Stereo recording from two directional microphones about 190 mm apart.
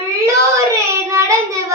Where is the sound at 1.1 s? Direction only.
15° right (ahead or behind).